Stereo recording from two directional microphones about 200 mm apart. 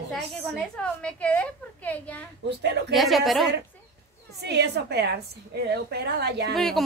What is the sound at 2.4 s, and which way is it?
Speech, 60° right (ahead or behind).